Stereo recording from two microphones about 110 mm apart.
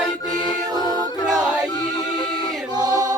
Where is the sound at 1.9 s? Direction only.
50° left (ahead or behind).